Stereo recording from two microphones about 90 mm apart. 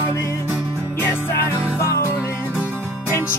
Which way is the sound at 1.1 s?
30° left (ahead or behind).